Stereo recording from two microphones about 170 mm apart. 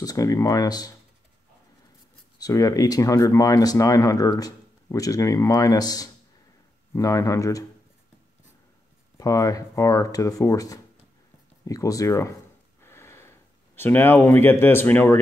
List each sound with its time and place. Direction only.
0.0 s speech: 20° left (ahead or behind)
2.3 s speech: 20° left (ahead or behind)
9.2 s speech: 20° left (ahead or behind)
12.8 s a sound: 15° left (ahead or behind)